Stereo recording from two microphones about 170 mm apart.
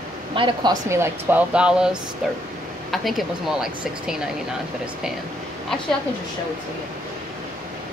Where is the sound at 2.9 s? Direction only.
Centre (ahead or behind).